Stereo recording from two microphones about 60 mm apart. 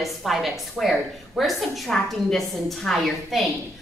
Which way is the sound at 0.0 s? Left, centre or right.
Centre.